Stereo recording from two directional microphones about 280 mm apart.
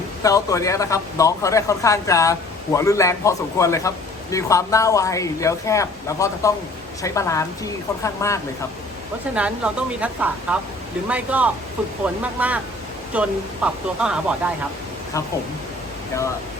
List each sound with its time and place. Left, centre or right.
0.2 s a man's voice: centre
9.3 s speech: centre